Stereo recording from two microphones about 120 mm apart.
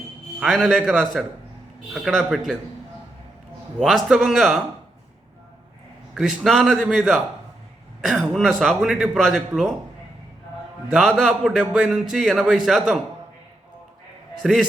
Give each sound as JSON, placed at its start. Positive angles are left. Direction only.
{"t": 0.3, "sound": "a man's voice", "side_deg": 0}
{"t": 1.9, "sound": "a man's voice", "side_deg": 0}
{"t": 3.8, "sound": "a man's voice", "side_deg": 0}
{"t": 6.1, "sound": "a man's voice", "side_deg": 0}
{"t": 10.9, "sound": "a man's voice", "side_deg": 0}
{"t": 14.4, "sound": "a man's voice", "side_deg": -5}